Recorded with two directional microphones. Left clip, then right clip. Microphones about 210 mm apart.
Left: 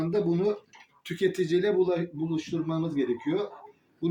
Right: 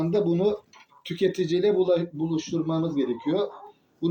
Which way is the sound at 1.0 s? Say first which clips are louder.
Right 2 dB; 20° left (ahead or behind).